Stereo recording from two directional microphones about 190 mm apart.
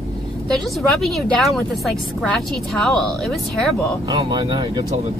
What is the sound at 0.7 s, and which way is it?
A woman's voice, centre (ahead or behind).